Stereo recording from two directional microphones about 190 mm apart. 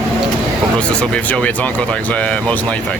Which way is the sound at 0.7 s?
5° left (ahead or behind).